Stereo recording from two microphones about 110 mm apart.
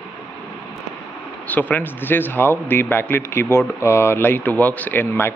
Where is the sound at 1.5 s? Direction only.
15° left (ahead or behind).